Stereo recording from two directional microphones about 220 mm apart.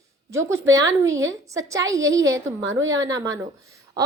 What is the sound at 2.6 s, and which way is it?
Speech, 60° right (ahead or behind).